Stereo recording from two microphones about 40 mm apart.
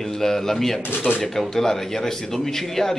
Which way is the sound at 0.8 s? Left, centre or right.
Left.